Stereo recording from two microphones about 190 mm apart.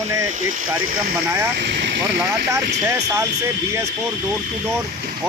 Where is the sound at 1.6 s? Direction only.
60° right (ahead or behind).